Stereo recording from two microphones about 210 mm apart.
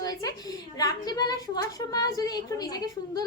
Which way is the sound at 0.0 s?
15° left (ahead or behind).